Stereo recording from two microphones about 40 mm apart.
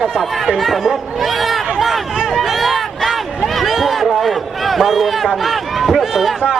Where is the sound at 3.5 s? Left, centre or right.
Centre.